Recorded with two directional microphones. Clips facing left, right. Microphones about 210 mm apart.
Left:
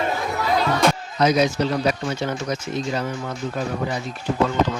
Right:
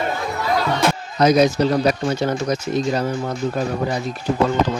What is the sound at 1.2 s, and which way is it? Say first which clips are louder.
Speech: right 4 dB; 40° right (ahead or behind).